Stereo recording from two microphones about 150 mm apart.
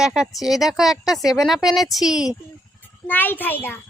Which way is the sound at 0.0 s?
5° right (ahead or behind).